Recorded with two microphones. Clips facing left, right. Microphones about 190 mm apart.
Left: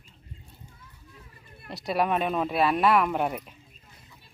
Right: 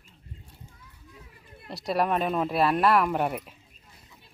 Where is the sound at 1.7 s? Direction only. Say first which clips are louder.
Even; centre (ahead or behind).